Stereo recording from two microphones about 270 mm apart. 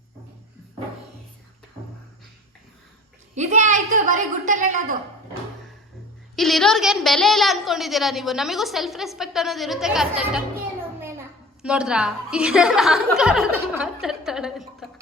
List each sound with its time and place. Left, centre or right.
3.3 s a woman's voice: right
6.3 s a woman's voice: centre
11.6 s a woman's voice: centre